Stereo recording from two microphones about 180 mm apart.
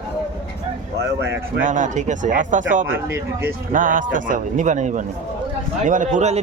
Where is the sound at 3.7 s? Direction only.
50° right (ahead or behind).